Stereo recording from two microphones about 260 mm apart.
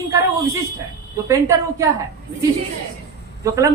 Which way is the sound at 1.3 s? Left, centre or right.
Centre.